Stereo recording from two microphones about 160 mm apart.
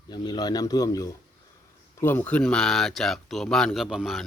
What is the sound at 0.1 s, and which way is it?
Speech, 25° left (ahead or behind).